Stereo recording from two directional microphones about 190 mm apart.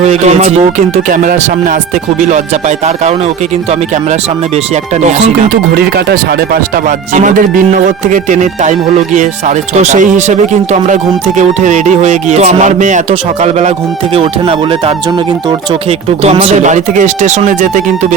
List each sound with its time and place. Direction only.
0.0 s speech: 35° right (ahead or behind)
5.7 s speech: 50° right (ahead or behind)